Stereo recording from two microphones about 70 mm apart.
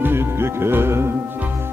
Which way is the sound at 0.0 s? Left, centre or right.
Right.